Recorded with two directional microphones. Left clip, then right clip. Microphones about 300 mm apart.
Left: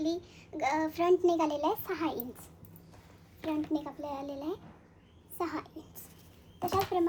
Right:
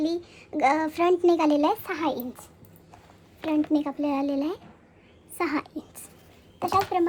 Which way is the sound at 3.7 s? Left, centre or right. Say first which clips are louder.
Right 10 dB; right.